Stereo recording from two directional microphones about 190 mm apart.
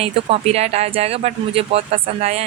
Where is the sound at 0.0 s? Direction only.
35° right (ahead or behind).